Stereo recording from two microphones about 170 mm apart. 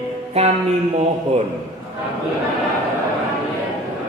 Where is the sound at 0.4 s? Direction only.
40° right (ahead or behind).